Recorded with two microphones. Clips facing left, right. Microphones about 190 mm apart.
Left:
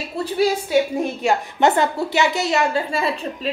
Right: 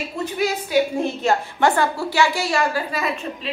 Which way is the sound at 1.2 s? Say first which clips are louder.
Left 2 dB; 20° left (ahead or behind).